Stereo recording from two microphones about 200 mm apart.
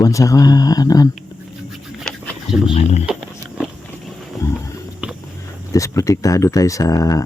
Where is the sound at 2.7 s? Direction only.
30° left (ahead or behind).